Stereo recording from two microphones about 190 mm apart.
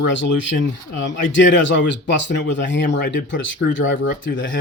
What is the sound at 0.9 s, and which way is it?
Speech, 75° left (ahead or behind).